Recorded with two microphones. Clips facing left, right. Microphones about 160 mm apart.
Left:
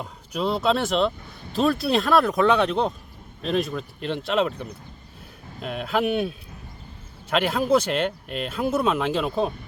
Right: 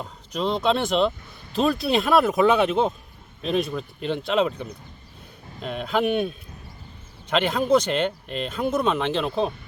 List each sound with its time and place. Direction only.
0.0 s speech: 5° left (ahead or behind)